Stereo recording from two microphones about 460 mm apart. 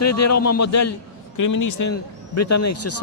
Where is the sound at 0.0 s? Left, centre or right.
Left.